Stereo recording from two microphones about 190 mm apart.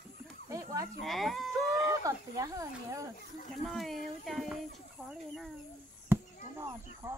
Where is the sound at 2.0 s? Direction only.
15° right (ahead or behind).